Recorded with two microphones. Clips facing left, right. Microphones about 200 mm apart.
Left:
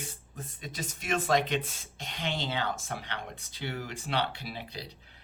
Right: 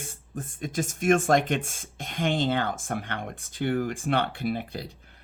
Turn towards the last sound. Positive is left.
turn(degrees=-50)  # may be behind; listen again after turning